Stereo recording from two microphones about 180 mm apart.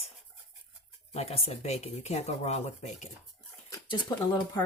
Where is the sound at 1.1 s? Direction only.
35° left (ahead or behind).